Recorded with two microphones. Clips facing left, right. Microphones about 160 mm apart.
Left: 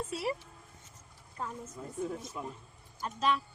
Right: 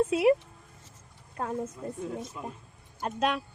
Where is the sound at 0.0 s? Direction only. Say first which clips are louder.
Right 12 dB; 65° right (ahead or behind).